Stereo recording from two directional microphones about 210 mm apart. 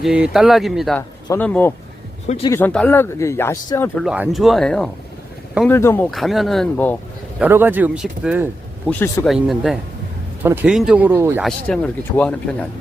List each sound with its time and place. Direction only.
0.0 s speech: 5° right (ahead or behind)
2.2 s speech: 30° left (ahead or behind)
2.5 s speech: 10° left (ahead or behind)
4.0 s speech: 5° right (ahead or behind)
6.1 s speech: centre (ahead or behind)
7.3 s speech: 10° right (ahead or behind)
8.9 s speech: 10° left (ahead or behind); by 11.4 s 10° right (ahead or behind)
11.4 s speech: 5° left (ahead or behind)